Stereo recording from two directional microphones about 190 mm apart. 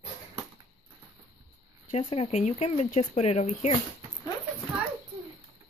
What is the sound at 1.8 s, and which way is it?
Speech, 30° left (ahead or behind).